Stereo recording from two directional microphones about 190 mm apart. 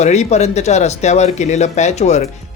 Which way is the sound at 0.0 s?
35° left (ahead or behind).